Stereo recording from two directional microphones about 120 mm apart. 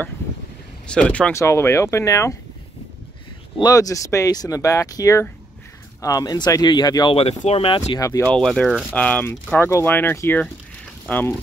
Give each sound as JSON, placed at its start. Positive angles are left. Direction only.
{"t": 0.8, "sound": "speech", "side_deg": 10}
{"t": 1.3, "sound": "speech", "side_deg": 25}
{"t": 3.6, "sound": "speech", "side_deg": 30}
{"t": 7.2, "sound": "speech", "side_deg": 55}
{"t": 8.3, "sound": "speech", "side_deg": 5}
{"t": 9.6, "sound": "speech", "side_deg": 20}